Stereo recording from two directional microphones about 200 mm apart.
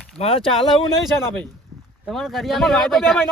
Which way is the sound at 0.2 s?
25° left (ahead or behind).